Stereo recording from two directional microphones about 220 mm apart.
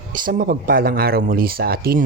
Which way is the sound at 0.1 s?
40° right (ahead or behind).